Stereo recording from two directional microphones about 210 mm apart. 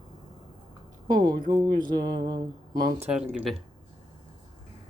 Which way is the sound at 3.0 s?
5° right (ahead or behind).